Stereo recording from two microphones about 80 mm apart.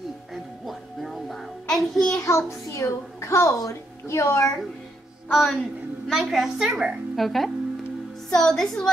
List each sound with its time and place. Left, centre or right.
0.3 s music: centre
2.2 s a woman's voice: left
5.3 s a woman's voice: centre
7.2 s a woman's voice: centre